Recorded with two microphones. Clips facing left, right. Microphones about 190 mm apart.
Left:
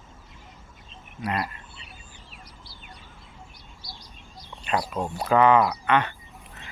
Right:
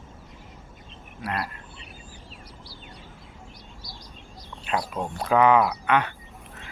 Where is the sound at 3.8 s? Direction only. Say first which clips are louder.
Left 1 dB; 45° right (ahead or behind).